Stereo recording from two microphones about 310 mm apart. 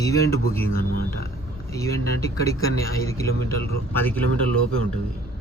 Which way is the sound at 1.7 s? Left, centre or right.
Centre.